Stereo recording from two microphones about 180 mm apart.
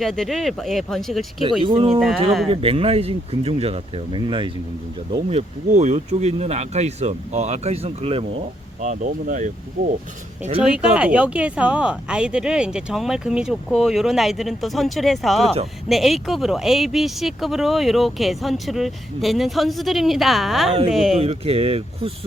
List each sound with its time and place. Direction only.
0.0 s speech: centre (ahead or behind)
1.6 s speech: 30° right (ahead or behind)
2.0 s speech: centre (ahead or behind)
2.5 s speech: 30° right (ahead or behind)
5.3 s speech: 35° right (ahead or behind)
8.9 s speech: 45° right (ahead or behind)
10.6 s speech: 5° right (ahead or behind)
21.2 s speech: 35° right (ahead or behind)